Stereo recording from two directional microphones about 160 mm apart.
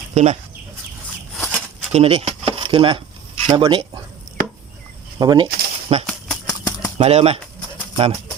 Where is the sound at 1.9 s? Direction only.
40° right (ahead or behind).